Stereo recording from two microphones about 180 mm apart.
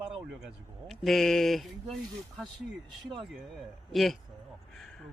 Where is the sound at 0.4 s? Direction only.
Centre (ahead or behind).